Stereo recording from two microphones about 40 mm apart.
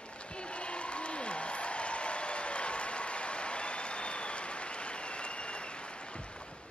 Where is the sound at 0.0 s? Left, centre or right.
Left.